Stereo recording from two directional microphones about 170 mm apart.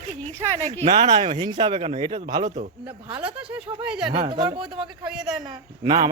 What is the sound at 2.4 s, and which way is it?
Speech, 45° right (ahead or behind).